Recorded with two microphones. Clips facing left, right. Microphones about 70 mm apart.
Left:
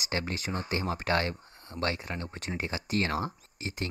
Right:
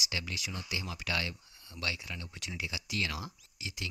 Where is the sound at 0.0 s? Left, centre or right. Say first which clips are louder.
Left 6 dB; left.